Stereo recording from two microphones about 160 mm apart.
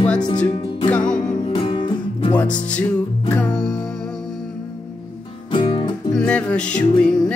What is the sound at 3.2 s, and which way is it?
Music, 10° left (ahead or behind).